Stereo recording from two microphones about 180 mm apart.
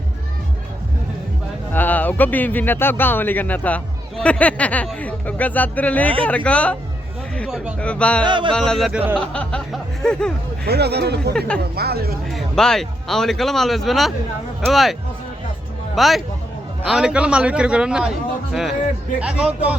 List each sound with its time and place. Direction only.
1.7 s speech: 10° left (ahead or behind)
8.2 s music: 25° right (ahead or behind)
8.5 s a man's voice: centre (ahead or behind)
10.7 s speech: 65° right (ahead or behind)
11.3 s a man's voice: 5° left (ahead or behind)
11.7 s speech: 60° right (ahead or behind)
12.3 s a man's voice: 5° left (ahead or behind)
16.0 s a man's voice: centre (ahead or behind)